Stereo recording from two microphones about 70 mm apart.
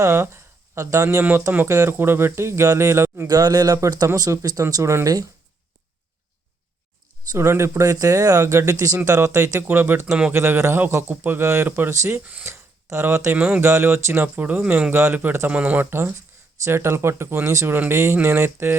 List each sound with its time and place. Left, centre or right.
0.0 s a man's voice: right
3.2 s speech: right
3.8 s speech: right
4.7 s speech: right
5.0 s speech: right
7.3 s a man's voice: right
10.1 s a man's voice: centre
10.3 s a man's voice: right
12.2 s speech: right
12.5 s a man's voice: right
15.9 s a man's voice: right